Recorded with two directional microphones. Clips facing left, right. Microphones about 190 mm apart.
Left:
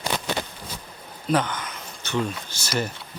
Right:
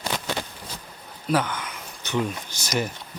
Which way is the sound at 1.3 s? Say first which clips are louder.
Left 1 dB; 10° right (ahead or behind).